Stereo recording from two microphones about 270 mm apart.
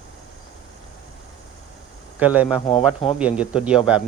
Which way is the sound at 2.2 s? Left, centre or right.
Centre.